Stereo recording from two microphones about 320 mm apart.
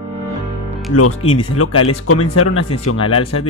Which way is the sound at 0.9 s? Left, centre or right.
Left.